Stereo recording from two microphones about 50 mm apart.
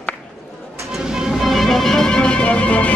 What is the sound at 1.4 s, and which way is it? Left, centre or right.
Music, centre.